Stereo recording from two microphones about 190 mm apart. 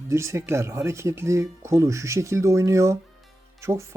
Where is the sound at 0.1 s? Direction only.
15° right (ahead or behind).